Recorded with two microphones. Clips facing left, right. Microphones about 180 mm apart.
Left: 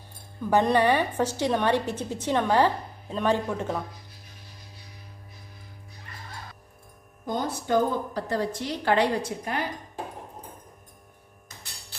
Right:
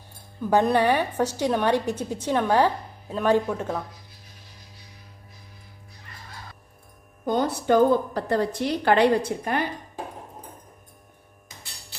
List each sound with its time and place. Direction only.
0.5 s a woman's voice: 10° right (ahead or behind)
7.3 s a woman's voice: 70° right (ahead or behind)